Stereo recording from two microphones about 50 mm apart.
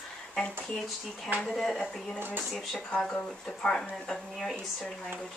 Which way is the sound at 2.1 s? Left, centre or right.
Right.